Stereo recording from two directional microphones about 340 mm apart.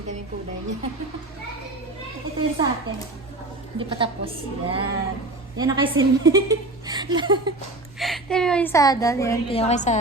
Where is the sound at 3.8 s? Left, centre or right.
Centre.